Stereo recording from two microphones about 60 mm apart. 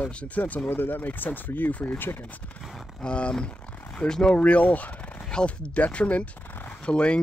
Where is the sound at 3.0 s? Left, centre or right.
Centre.